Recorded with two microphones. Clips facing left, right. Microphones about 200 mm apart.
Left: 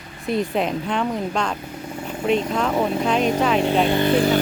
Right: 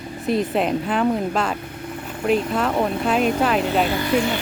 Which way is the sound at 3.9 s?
25° left (ahead or behind).